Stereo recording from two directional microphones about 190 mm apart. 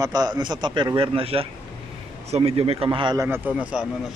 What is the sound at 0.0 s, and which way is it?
A man's voice, 20° right (ahead or behind).